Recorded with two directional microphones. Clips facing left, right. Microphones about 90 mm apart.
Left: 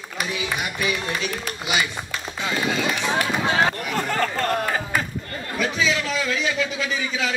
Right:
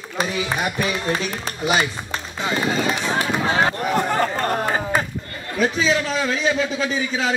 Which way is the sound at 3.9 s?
20° right (ahead or behind).